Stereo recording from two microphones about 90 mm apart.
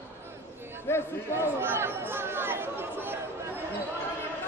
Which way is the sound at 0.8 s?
25° left (ahead or behind).